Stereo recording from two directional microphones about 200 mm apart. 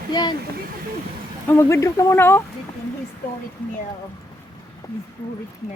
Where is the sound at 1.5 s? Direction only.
15° left (ahead or behind).